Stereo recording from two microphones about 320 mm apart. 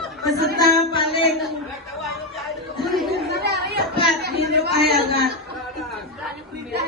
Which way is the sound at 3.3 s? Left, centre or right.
Right.